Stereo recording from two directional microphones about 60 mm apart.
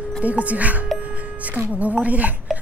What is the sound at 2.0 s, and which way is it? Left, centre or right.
Speech, right.